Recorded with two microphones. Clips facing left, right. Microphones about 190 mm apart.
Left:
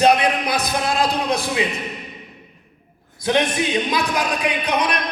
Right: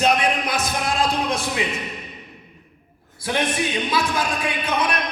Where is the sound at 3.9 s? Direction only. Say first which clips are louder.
Left 1 dB; 15° left (ahead or behind).